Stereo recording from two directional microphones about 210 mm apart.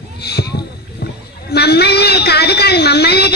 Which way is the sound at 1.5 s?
50° left (ahead or behind).